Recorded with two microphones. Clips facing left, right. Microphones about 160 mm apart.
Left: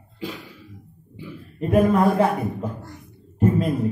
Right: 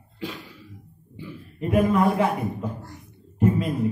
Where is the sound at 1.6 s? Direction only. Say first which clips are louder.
Left 3 dB; 40° left (ahead or behind).